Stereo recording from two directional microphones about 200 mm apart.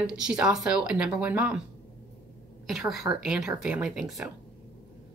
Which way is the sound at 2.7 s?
Centre (ahead or behind).